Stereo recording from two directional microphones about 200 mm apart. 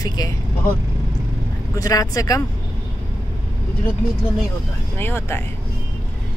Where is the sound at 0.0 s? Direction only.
20° left (ahead or behind).